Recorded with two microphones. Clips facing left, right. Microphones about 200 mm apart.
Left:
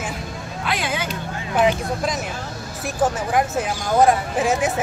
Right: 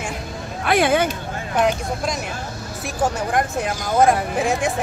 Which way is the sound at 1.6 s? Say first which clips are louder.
Left 1 dB; centre (ahead or behind).